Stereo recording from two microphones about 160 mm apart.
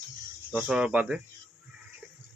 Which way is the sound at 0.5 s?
5° right (ahead or behind).